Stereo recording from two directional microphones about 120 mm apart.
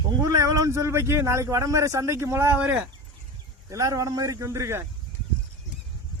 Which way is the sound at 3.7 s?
30° right (ahead or behind).